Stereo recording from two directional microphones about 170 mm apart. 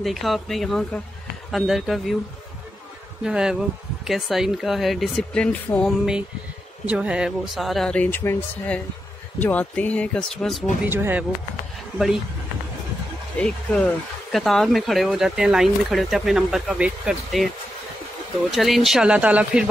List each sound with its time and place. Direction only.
0.0 s speech: centre (ahead or behind)
3.3 s speech: 5° right (ahead or behind)
6.9 s speech: 5° right (ahead or behind)
10.9 s speech: 10° right (ahead or behind)
13.4 s speech: 5° left (ahead or behind)
18.5 s speech: centre (ahead or behind)